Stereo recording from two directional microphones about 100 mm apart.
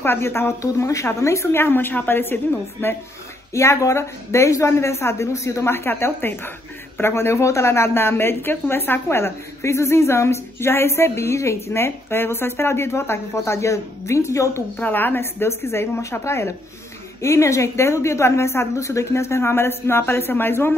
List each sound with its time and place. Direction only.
0.0 s speech: 25° left (ahead or behind)
14.8 s speech: 20° left (ahead or behind)